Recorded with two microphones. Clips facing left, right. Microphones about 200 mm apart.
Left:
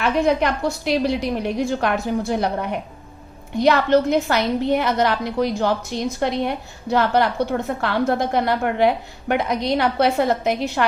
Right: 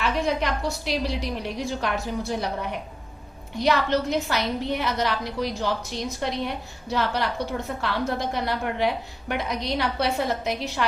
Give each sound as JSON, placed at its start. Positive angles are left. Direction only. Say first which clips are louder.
{"t": 0.0, "sound": "a woman's voice", "louder": "left 6 dB", "side_deg": 55}